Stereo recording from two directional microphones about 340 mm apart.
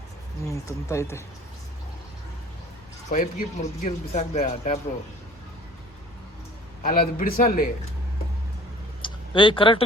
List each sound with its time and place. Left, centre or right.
0.4 s speech: centre
3.1 s speech: centre
6.8 s speech: left
9.0 s a sound: centre